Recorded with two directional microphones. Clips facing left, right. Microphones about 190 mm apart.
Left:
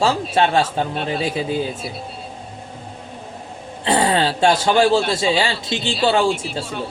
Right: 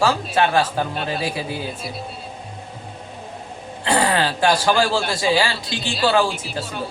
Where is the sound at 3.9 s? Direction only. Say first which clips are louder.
Left 2 dB; 25° left (ahead or behind).